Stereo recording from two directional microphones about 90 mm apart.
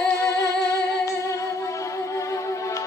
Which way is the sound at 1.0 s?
35° left (ahead or behind).